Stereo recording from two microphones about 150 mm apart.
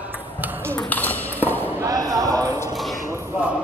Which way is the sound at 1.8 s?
25° right (ahead or behind).